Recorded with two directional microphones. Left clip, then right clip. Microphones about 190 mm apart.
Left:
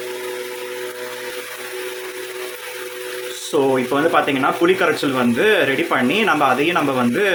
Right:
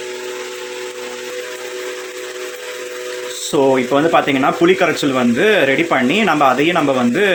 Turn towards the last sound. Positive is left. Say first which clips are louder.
# right 3 dB
turn(degrees=-20)  # may be behind; listen again after turning